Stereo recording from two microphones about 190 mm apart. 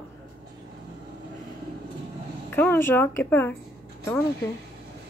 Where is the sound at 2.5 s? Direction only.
10° left (ahead or behind).